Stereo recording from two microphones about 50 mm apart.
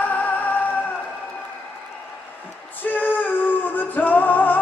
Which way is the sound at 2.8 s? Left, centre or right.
Left.